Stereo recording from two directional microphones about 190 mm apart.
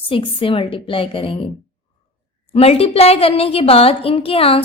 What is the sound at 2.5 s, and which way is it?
A woman's voice, 30° left (ahead or behind).